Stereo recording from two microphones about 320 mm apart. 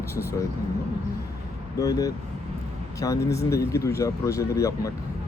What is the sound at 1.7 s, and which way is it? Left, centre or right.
Speech, centre.